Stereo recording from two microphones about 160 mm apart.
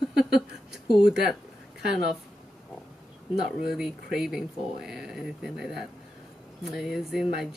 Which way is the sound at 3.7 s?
5° right (ahead or behind).